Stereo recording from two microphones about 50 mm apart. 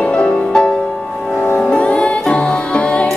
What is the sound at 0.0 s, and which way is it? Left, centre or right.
Music, left.